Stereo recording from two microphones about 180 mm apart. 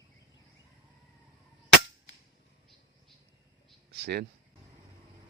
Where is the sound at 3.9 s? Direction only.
65° right (ahead or behind).